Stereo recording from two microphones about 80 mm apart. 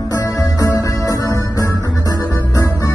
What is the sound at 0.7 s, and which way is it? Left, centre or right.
Music, left.